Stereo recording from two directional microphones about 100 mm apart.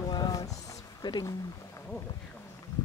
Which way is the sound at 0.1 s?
40° left (ahead or behind).